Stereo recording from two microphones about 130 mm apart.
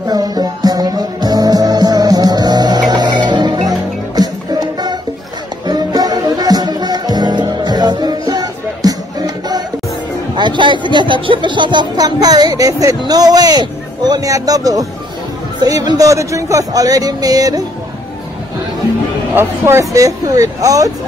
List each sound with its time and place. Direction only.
0.0 s music: 30° right (ahead or behind)
10.3 s speech: 35° right (ahead or behind)
19.3 s speech: 20° right (ahead or behind)